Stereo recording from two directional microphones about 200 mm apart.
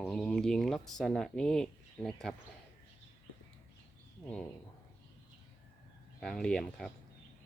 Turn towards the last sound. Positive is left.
turn(degrees=5)  # may be behind; listen again after turning